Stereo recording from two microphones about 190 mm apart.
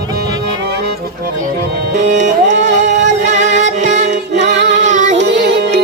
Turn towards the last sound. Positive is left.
turn(degrees=-60)  # may be behind; listen again after turning